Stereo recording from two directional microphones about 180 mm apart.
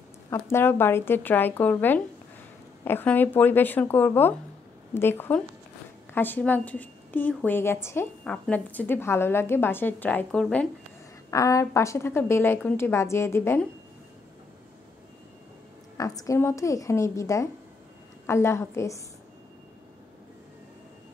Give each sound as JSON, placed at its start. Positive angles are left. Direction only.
{"t": 0.3, "sound": "a woman's voice", "side_deg": 15}
{"t": 11.2, "sound": "a woman's voice", "side_deg": 15}
{"t": 16.0, "sound": "a woman's voice", "side_deg": 20}